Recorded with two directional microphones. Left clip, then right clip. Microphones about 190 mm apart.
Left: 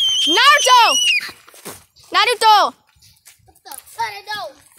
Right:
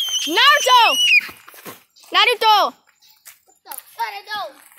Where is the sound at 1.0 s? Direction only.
55° left (ahead or behind).